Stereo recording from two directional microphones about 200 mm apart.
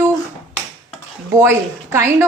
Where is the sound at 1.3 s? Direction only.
15° right (ahead or behind).